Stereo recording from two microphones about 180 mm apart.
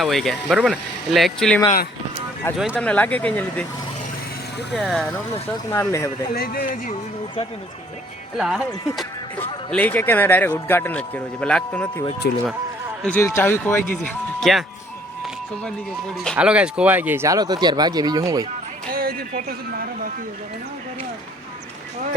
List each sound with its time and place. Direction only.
0.0 s speech: centre (ahead or behind)
2.7 s a man's voice: 10° left (ahead or behind)
4.7 s speech: 5° left (ahead or behind)
5.7 s a man's voice: 15° left (ahead or behind)
6.3 s speech: 55° left (ahead or behind)
8.4 s speech: 5° right (ahead or behind)
9.6 s a man's voice: 10° left (ahead or behind)
12.2 s speech: 65° left (ahead or behind)
13.0 s a man's voice: 10° left (ahead or behind)
15.6 s speech: 5° left (ahead or behind); by 18.4 s 20° right (ahead or behind)
18.9 s speech: 55° right (ahead or behind)